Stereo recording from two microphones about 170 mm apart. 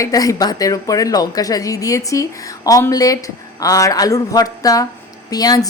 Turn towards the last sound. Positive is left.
turn(degrees=20)  # may be behind; listen again after turning